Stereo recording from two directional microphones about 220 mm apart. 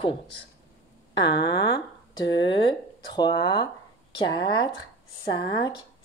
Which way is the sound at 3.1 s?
20° left (ahead or behind).